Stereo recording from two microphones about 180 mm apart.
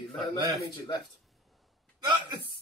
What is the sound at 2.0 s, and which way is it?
Speech, 25° right (ahead or behind).